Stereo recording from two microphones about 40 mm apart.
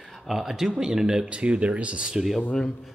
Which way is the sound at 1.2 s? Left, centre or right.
Right.